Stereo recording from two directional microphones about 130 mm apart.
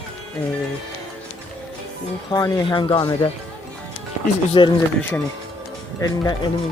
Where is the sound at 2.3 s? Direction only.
30° left (ahead or behind).